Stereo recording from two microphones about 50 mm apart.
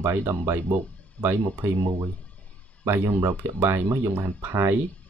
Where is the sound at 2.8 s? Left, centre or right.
Right.